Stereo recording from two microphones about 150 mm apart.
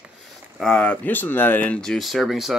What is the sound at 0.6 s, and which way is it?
Speech, 5° left (ahead or behind).